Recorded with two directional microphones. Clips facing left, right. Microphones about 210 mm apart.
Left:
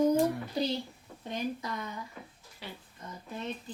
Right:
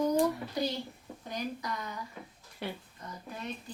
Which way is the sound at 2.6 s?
55° right (ahead or behind).